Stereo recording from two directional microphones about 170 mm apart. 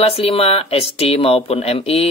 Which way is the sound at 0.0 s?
35° left (ahead or behind).